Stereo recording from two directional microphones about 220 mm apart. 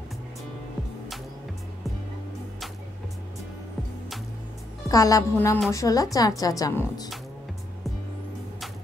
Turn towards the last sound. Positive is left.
turn(degrees=15)  # may be behind; listen again after turning